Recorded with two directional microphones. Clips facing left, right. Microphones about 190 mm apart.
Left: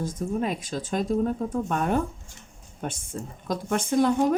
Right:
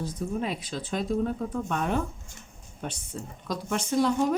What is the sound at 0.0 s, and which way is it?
Speech, 50° left (ahead or behind).